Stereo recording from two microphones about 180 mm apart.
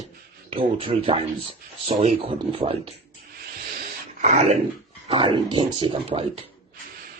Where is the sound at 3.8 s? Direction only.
45° right (ahead or behind).